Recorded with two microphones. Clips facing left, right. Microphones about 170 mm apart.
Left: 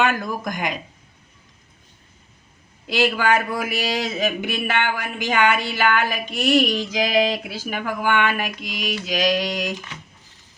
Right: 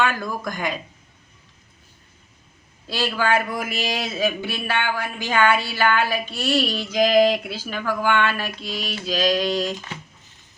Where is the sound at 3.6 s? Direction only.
10° left (ahead or behind).